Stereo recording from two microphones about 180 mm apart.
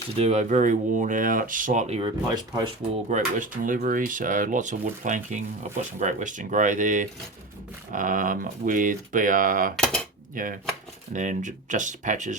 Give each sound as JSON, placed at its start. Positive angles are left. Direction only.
{"t": 0.2, "sound": "speech", "side_deg": -40}
{"t": 2.0, "sound": "speech", "side_deg": -25}
{"t": 3.1, "sound": "speech", "side_deg": -45}
{"t": 9.7, "sound": "speech", "side_deg": 5}
{"t": 10.3, "sound": "speech", "side_deg": -50}